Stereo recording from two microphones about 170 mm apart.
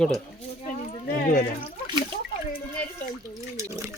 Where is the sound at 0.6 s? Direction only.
55° left (ahead or behind).